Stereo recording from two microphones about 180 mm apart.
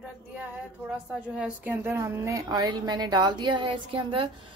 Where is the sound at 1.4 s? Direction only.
10° right (ahead or behind).